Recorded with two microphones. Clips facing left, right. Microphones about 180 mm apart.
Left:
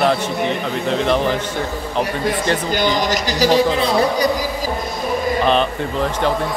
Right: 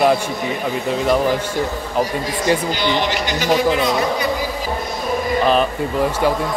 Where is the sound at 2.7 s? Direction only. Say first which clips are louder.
Left 1 dB; 45° left (ahead or behind).